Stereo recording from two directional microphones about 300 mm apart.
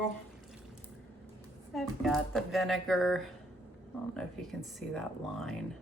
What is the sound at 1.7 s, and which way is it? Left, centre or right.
Speech, centre.